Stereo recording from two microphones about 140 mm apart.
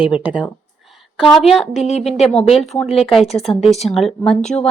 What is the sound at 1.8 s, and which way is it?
Speech, 50° left (ahead or behind).